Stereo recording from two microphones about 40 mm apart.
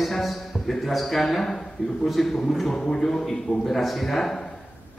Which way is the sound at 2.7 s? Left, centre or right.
Left.